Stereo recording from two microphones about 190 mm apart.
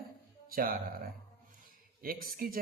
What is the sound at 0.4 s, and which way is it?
A woman's voice, 50° right (ahead or behind).